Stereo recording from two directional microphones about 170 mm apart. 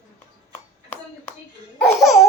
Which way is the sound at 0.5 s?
10° left (ahead or behind).